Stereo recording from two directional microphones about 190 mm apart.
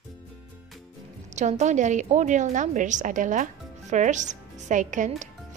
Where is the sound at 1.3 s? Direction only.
40° right (ahead or behind).